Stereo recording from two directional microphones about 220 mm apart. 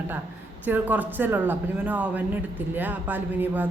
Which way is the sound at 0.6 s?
10° right (ahead or behind).